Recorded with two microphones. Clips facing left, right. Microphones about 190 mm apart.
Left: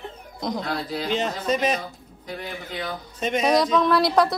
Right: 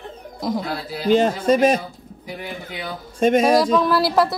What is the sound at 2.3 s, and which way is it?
Speech, 10° right (ahead or behind).